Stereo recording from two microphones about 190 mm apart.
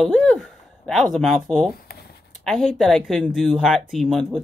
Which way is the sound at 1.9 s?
55° left (ahead or behind).